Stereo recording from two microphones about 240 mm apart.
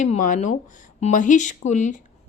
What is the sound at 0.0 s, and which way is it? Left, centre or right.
A woman's voice, left.